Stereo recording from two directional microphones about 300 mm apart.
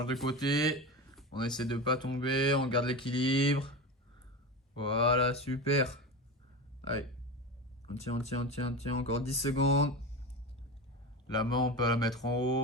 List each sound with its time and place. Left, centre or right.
0.0 s speech: centre
0.8 s a sound: centre
1.3 s speech: centre
4.8 s speech: centre
7.9 s speech: left
11.3 s speech: centre